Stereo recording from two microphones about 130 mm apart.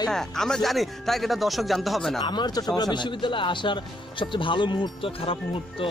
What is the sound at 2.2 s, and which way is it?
Speech, 35° left (ahead or behind).